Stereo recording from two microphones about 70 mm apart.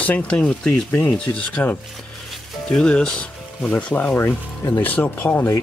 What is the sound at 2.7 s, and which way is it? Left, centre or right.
Speech, centre.